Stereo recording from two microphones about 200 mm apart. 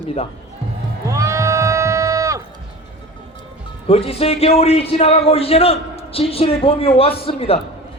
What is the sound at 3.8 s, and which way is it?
A man's voice, 30° left (ahead or behind).